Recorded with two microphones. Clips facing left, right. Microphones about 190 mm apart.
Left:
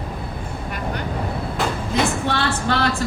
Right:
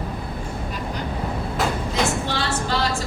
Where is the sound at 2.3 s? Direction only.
60° left (ahead or behind).